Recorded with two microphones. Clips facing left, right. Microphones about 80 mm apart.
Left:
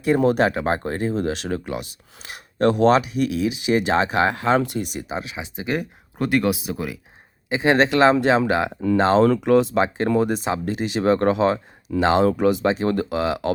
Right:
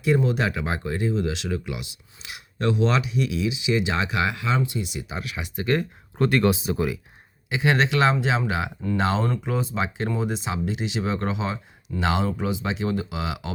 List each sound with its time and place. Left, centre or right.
0.0 s speech: left
4.6 s speech: left
5.1 s speech: left; by 7.0 s centre
7.5 s speech: left
9.2 s speech: left
9.7 s speech: left
10.1 s speech: left
12.6 s speech: left